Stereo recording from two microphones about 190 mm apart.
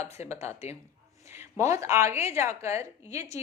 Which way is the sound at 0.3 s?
15° right (ahead or behind).